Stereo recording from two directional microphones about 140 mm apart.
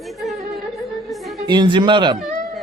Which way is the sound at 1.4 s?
30° right (ahead or behind).